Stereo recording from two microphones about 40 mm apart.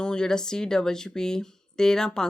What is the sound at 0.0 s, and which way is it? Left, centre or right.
Speech, centre.